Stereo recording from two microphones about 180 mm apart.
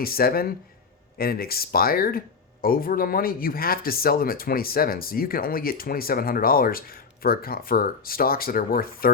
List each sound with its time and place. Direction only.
0.0 s speech: 55° left (ahead or behind)